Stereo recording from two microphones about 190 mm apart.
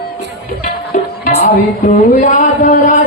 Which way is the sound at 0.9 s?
40° left (ahead or behind).